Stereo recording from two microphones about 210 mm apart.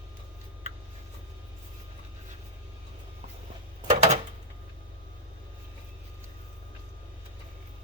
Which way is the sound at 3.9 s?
30° right (ahead or behind).